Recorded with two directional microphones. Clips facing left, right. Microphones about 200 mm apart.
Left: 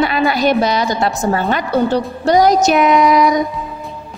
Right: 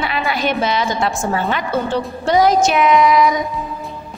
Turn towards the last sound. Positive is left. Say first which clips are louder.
# left 1 dB
turn(degrees=40)  # may be behind; listen again after turning